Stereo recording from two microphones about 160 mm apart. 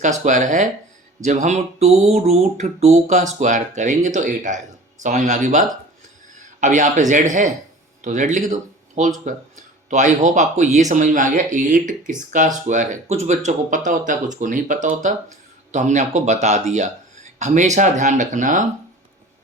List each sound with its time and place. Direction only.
0.0 s speech: 50° right (ahead or behind)